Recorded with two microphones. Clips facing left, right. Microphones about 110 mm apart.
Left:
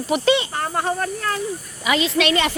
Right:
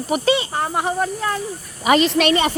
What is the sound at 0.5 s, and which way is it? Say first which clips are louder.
Speech: right 2 dB; 15° right (ahead or behind).